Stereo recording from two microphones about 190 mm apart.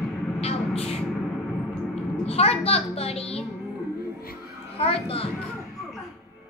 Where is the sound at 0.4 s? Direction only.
30° left (ahead or behind).